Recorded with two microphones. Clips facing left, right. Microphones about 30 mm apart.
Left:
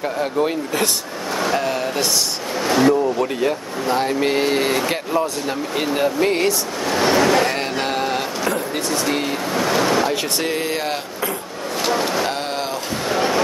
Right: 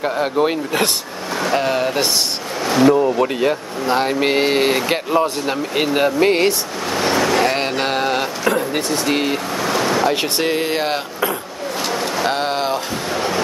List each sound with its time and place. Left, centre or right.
0.2 s speech: right
2.6 s speech: centre
3.2 s speech: right
6.9 s speech: centre
7.8 s a sound: right
9.0 s speech: right
9.6 s speech: centre
10.4 s speech: right
11.8 s vehicle: centre
13.1 s a sound: centre